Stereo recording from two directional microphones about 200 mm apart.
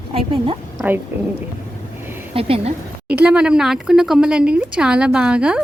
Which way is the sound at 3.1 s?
5° right (ahead or behind).